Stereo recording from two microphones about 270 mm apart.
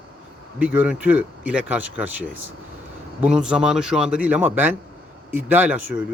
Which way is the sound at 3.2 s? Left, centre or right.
Centre.